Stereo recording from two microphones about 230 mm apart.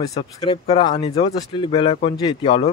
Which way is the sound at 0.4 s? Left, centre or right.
Left.